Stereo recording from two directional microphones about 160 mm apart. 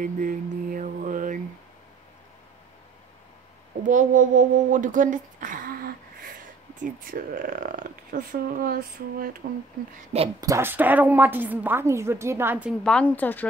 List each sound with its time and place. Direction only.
0.0 s mantra: 55° right (ahead or behind)
3.8 s speech: 55° right (ahead or behind)
6.8 s speech: 60° right (ahead or behind)
10.4 s a woman's voice: 15° right (ahead or behind)
12.8 s speech: 5° left (ahead or behind)